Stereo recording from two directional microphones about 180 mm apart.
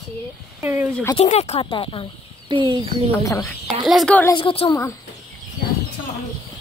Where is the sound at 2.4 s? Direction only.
25° right (ahead or behind).